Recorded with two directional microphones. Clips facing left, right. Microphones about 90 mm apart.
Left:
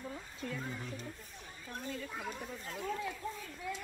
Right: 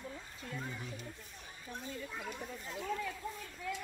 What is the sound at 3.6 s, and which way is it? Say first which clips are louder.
Speech: right 1 dB; 15° left (ahead or behind).